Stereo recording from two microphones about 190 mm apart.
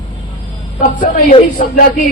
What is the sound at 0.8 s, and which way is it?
Speech, 45° left (ahead or behind).